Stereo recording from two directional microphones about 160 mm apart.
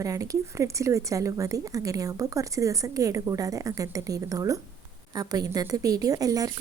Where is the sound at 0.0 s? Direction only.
20° right (ahead or behind).